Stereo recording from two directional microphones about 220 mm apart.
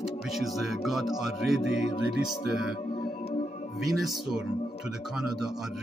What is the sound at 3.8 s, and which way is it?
Speech, centre (ahead or behind).